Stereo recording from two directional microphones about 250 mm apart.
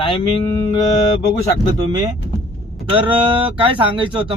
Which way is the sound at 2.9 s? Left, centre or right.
Centre.